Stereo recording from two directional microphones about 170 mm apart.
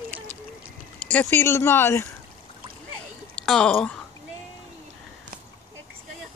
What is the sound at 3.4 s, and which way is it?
Speech, 5° left (ahead or behind).